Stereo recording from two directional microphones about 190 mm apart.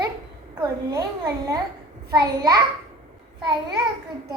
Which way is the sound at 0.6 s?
20° right (ahead or behind).